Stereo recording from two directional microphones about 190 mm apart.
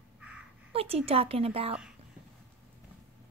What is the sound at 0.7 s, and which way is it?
Speech, 30° right (ahead or behind).